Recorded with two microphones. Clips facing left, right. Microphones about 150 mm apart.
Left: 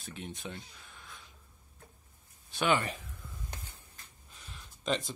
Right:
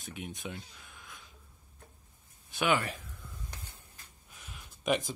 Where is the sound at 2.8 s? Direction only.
Centre (ahead or behind).